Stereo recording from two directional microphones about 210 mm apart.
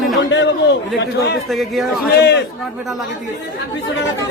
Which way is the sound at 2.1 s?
50° left (ahead or behind).